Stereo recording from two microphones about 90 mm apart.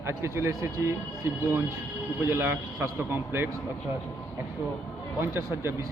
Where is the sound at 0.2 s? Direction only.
30° right (ahead or behind).